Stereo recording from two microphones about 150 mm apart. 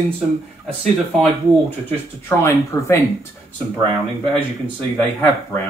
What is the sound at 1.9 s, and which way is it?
Speech, 15° left (ahead or behind).